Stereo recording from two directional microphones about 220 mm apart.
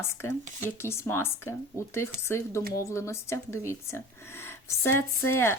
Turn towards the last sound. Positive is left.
turn(degrees=10)  # may be behind; listen again after turning